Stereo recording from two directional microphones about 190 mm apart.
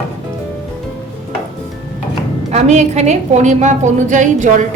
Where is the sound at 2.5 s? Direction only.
35° right (ahead or behind).